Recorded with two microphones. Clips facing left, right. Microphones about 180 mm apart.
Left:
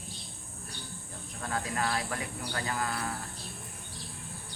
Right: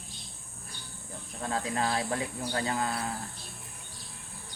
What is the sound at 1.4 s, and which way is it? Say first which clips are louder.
Speech: right 2 dB; 25° right (ahead or behind).